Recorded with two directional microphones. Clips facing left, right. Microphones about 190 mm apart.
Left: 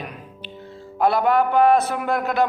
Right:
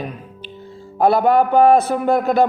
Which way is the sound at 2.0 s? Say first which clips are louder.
Right 6 dB; 45° right (ahead or behind).